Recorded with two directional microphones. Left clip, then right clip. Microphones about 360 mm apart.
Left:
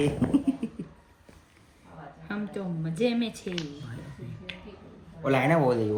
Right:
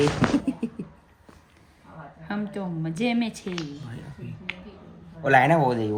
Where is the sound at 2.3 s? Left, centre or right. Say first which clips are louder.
Right 3 dB; right.